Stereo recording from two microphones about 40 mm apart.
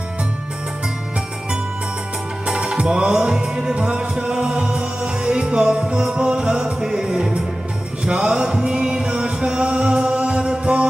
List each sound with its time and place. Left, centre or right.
2.4 s music: centre
6.8 s music: centre